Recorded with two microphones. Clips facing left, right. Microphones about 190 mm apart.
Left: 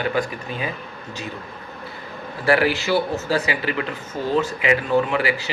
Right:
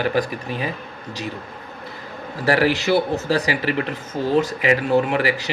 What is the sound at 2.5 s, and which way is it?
Speech, 40° right (ahead or behind).